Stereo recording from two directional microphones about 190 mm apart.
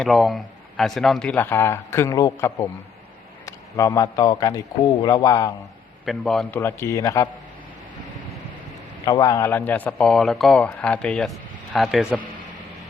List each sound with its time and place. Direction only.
0.0 s speech: centre (ahead or behind); by 5.5 s 20° left (ahead or behind)
6.1 s speech: centre (ahead or behind)
6.6 s speech: 15° left (ahead or behind)
9.0 s speech: 20° left (ahead or behind); by 12.2 s centre (ahead or behind)